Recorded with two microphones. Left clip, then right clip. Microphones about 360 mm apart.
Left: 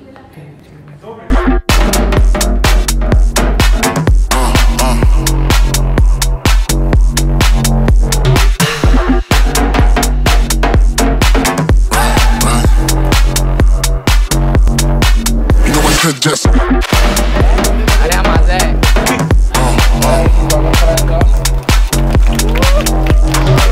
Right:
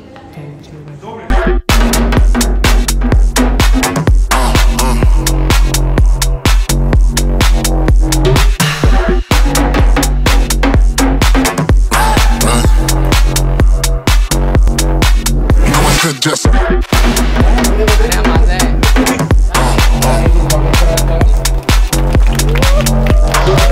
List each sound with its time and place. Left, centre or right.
1.7 s music: centre